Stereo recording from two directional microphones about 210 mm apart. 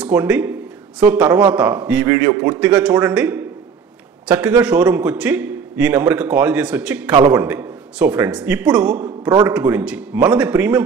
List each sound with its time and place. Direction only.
0.0 s a man's voice: 5° right (ahead or behind)
9.0 s a man's voice: 20° right (ahead or behind)
9.5 s a man's voice: 5° right (ahead or behind)